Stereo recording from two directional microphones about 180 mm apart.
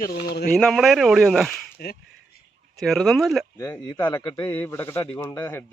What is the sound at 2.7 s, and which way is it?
Speech, centre (ahead or behind).